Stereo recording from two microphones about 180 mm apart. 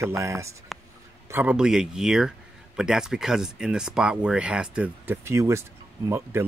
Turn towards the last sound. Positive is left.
turn(degrees=-15)  # may be behind; listen again after turning